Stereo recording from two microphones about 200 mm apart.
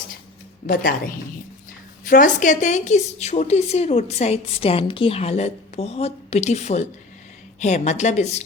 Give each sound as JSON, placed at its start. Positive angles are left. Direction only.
{"t": 0.7, "sound": "a woman's voice", "side_deg": 45}